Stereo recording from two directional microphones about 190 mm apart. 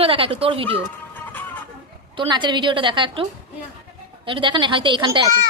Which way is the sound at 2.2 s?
25° right (ahead or behind).